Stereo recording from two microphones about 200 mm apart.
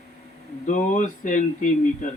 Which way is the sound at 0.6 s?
40° left (ahead or behind).